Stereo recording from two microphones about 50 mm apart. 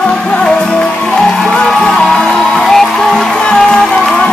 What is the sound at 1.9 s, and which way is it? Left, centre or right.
Music, centre.